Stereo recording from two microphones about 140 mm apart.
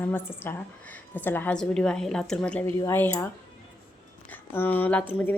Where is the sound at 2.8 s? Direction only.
20° left (ahead or behind).